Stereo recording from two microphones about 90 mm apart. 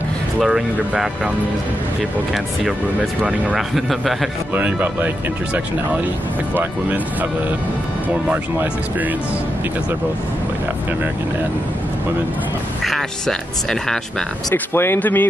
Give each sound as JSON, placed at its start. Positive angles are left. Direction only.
{"t": 0.4, "sound": "speech", "side_deg": -5}
{"t": 3.2, "sound": "speech", "side_deg": -15}
{"t": 3.5, "sound": "speech", "side_deg": 0}
{"t": 4.6, "sound": "speech", "side_deg": -15}
{"t": 12.8, "sound": "speech", "side_deg": 5}
{"t": 14.5, "sound": "speech", "side_deg": 25}